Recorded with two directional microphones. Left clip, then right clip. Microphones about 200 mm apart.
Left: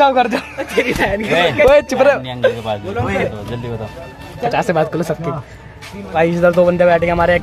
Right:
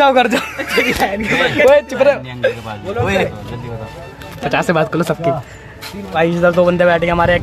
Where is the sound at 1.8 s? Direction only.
15° left (ahead or behind).